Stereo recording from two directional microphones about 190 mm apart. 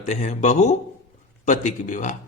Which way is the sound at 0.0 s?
40° left (ahead or behind).